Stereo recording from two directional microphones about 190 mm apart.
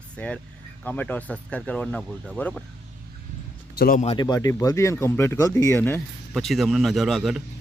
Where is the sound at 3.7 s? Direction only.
55° left (ahead or behind).